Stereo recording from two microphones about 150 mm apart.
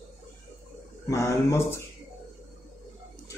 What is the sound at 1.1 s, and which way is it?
Speech, 15° left (ahead or behind).